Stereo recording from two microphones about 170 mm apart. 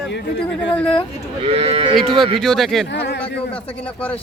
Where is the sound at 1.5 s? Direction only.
35° right (ahead or behind).